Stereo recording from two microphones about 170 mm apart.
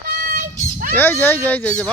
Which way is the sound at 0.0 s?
65° right (ahead or behind).